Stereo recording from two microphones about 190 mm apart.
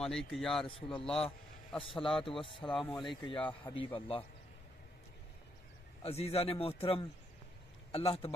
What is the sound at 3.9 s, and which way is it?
Speech, 30° left (ahead or behind).